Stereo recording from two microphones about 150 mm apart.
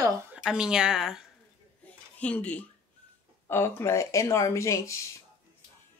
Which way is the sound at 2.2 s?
10° left (ahead or behind).